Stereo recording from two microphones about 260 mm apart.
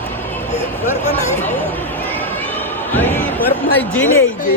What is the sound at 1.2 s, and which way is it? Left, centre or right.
Chatter, left.